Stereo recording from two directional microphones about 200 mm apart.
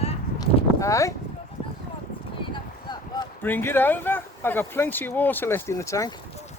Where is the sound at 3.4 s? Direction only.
10° left (ahead or behind).